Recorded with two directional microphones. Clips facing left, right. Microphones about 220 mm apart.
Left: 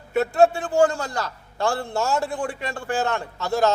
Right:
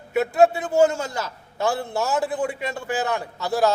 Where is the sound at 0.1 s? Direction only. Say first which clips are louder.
Even; 5° right (ahead or behind).